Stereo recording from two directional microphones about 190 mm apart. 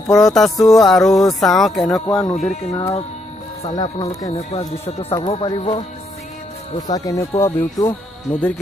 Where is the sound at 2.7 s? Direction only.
25° left (ahead or behind).